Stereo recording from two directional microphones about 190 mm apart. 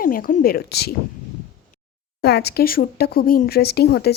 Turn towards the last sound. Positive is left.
turn(degrees=55)  # may be behind; listen again after turning